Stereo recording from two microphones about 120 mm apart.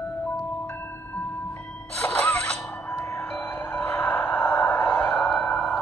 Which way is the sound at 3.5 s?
15° left (ahead or behind).